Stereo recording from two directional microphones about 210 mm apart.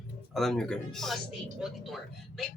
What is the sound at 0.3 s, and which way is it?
Speech, centre (ahead or behind).